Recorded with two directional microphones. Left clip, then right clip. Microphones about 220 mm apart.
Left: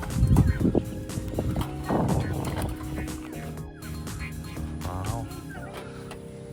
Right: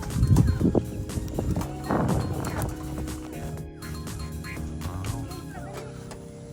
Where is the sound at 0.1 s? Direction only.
Centre (ahead or behind).